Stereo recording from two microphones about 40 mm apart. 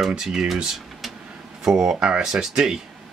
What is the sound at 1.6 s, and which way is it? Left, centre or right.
Speech, centre.